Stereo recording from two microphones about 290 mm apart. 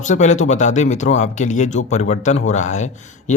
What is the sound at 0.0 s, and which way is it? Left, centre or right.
Speech, left.